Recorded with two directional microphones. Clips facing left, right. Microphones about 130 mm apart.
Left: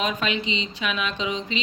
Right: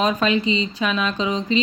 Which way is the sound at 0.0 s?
40° right (ahead or behind).